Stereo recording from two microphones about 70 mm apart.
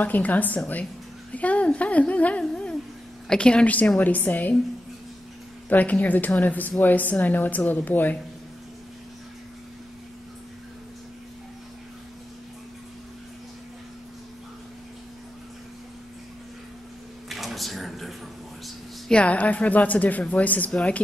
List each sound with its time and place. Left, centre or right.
0.0 s a woman's voice: left
2.4 s a sound: centre
3.3 s a woman's voice: centre
5.7 s a woman's voice: left
17.3 s a sound: centre
19.0 s a woman's voice: centre